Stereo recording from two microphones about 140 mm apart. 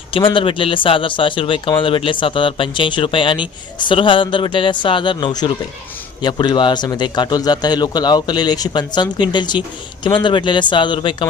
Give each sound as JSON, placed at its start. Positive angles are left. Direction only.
{"t": 0.1, "sound": "speech", "side_deg": 40}